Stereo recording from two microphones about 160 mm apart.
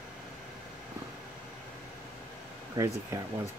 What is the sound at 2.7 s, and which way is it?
Speech, 20° right (ahead or behind).